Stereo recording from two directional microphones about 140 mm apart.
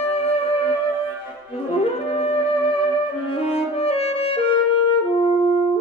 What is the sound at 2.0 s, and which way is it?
Music, 45° left (ahead or behind).